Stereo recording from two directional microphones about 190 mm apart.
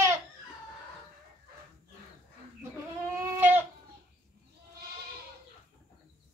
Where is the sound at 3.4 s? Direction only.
10° right (ahead or behind).